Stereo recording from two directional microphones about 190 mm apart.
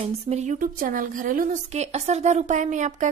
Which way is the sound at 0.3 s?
40° right (ahead or behind).